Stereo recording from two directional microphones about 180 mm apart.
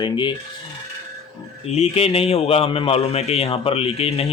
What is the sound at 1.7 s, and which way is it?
A man's voice, 35° left (ahead or behind).